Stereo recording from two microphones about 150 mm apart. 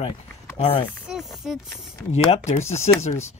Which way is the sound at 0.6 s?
40° left (ahead or behind).